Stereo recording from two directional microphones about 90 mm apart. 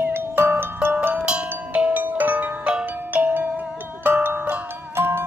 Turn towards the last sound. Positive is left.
turn(degrees=-25)  # may be behind; listen again after turning